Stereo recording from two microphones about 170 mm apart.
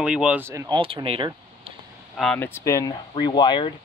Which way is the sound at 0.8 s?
30° right (ahead or behind).